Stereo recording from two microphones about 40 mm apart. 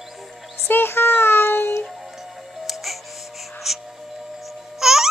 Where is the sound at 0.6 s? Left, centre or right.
Left.